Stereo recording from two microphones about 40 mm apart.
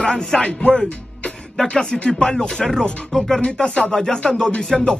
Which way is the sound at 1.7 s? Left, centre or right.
Centre.